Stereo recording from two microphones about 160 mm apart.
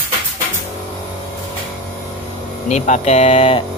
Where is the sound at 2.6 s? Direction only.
50° left (ahead or behind).